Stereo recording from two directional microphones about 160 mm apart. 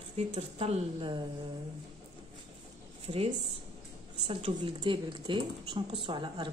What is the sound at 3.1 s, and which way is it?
Speech, 40° right (ahead or behind).